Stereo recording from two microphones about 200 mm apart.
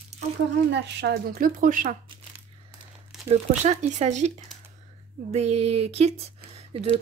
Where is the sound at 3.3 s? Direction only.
35° right (ahead or behind).